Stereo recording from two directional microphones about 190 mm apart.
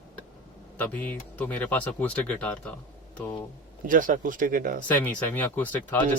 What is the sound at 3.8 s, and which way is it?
Speech, 45° right (ahead or behind).